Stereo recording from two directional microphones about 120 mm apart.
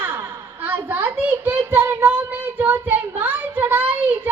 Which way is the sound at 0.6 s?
15° right (ahead or behind).